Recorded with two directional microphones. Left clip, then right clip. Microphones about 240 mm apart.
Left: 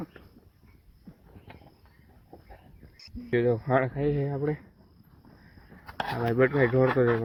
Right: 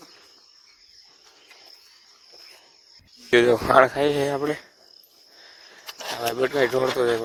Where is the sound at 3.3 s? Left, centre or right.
Right.